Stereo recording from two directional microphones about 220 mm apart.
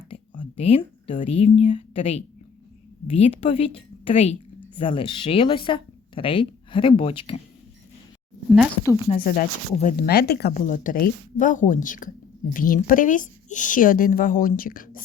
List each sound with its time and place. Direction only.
0.1 s a woman's voice: 25° left (ahead or behind)
9.2 s speech: 40° left (ahead or behind)